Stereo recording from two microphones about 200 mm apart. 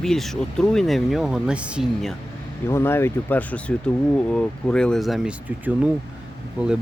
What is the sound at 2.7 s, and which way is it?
Speech, 10° left (ahead or behind).